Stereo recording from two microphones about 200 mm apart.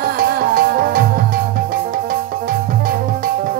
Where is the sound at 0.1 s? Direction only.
50° right (ahead or behind).